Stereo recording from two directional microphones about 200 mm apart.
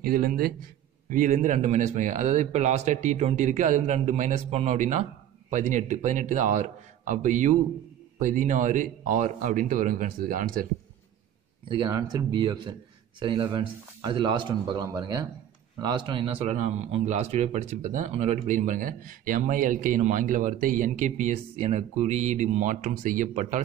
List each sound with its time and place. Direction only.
0.0 s a man's voice: 45° right (ahead or behind)
11.7 s a man's voice: 20° right (ahead or behind); by 23.6 s 35° right (ahead or behind)